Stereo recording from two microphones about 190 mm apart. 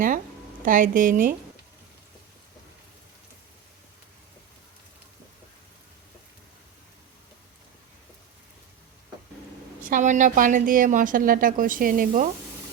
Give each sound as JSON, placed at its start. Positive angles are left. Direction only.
{"t": 0.6, "sound": "speech", "side_deg": -45}
{"t": 9.8, "sound": "speech", "side_deg": -45}